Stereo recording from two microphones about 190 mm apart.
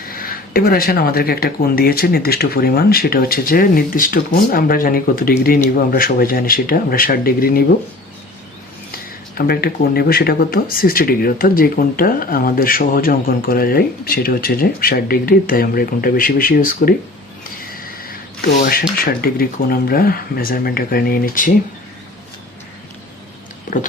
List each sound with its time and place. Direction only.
0.0 s speech: 50° left (ahead or behind)
8.9 s speech: 50° left (ahead or behind)
23.7 s pig: 40° left (ahead or behind)